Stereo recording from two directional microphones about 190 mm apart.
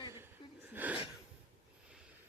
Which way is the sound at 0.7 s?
10° right (ahead or behind).